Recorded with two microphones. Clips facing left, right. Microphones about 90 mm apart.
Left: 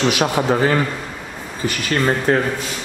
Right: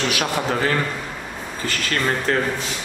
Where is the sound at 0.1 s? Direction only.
20° left (ahead or behind).